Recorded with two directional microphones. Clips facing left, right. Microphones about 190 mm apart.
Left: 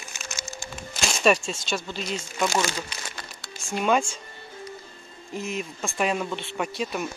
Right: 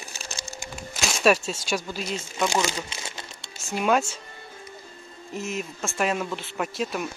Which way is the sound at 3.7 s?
5° right (ahead or behind).